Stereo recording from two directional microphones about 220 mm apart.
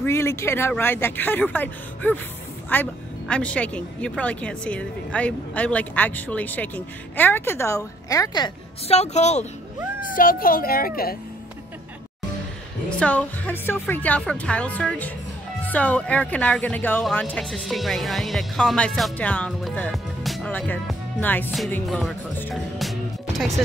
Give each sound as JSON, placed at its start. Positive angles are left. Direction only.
{"t": 0.0, "sound": "speech", "side_deg": 10}
{"t": 8.8, "sound": "a child's voice", "side_deg": 30}
{"t": 13.0, "sound": "speech", "side_deg": 5}